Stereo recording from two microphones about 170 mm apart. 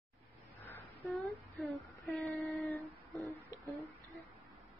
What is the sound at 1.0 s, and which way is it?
Female singing, centre (ahead or behind).